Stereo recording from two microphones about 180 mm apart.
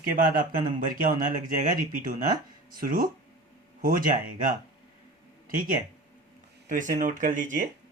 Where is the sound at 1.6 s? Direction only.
50° right (ahead or behind).